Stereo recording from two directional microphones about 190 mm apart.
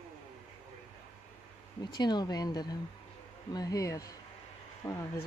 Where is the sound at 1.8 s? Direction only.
20° left (ahead or behind).